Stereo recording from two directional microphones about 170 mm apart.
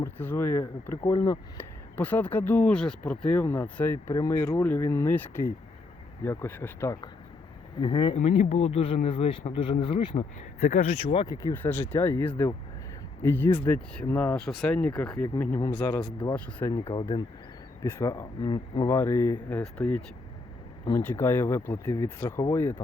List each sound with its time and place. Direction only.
0.0 s speech: 15° left (ahead or behind); by 8.1 s 30° left (ahead or behind)
8.1 s speech: 40° left (ahead or behind)
10.7 s speech: 40° left (ahead or behind)
11.3 s speech: 15° left (ahead or behind)
16.8 s speech: 30° left (ahead or behind)
18.0 s speech: 15° left (ahead or behind)
18.9 s speech: 15° left (ahead or behind)